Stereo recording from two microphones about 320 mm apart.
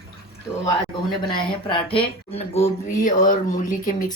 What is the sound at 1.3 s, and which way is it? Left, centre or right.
Speech, centre.